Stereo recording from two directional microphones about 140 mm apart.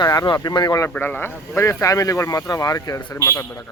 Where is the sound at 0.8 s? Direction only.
15° left (ahead or behind).